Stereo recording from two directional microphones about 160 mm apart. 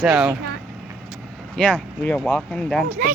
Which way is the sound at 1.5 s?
5° left (ahead or behind).